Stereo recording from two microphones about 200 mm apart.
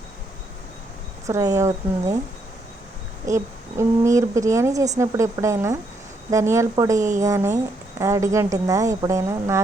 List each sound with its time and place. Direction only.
1.3 s a woman's voice: 15° right (ahead or behind)
3.2 s a woman's voice: 15° right (ahead or behind)